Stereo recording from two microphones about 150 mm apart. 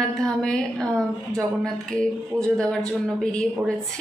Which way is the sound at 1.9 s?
5° left (ahead or behind).